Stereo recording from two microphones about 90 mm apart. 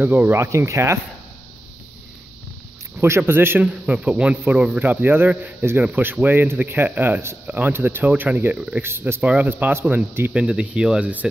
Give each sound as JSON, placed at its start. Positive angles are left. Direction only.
{"t": 0.0, "sound": "a man's voice", "side_deg": -20}
{"t": 0.4, "sound": "speech", "side_deg": -35}
{"t": 3.0, "sound": "a man's voice", "side_deg": -25}
{"t": 3.6, "sound": "a man's voice", "side_deg": -15}
{"t": 8.8, "sound": "a man's voice", "side_deg": -25}
{"t": 10.3, "sound": "a man's voice", "side_deg": -10}